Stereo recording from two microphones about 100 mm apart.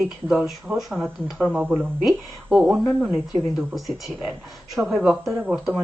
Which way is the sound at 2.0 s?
10° right (ahead or behind).